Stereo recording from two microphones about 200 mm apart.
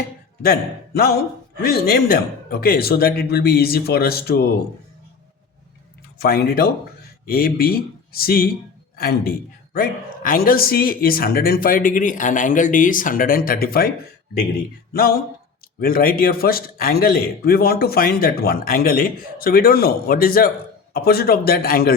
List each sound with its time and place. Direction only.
0.4 s a man's voice: 50° left (ahead or behind)
6.1 s a man's voice: 50° left (ahead or behind)
15.8 s a man's voice: 45° left (ahead or behind)